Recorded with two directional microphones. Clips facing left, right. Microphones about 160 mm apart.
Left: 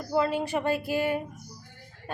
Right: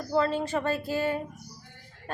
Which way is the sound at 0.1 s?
10° left (ahead or behind).